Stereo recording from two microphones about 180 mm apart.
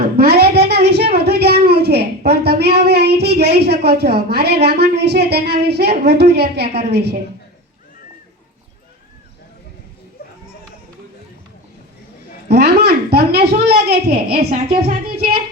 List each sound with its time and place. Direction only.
0.2 s a sound: 60° right (ahead or behind)
4.6 s a woman's voice: 65° right (ahead or behind)
12.5 s a woman's voice: 65° right (ahead or behind)
14.5 s speech: 35° right (ahead or behind)